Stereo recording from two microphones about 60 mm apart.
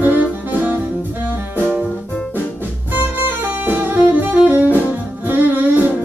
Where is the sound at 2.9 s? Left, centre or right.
Right.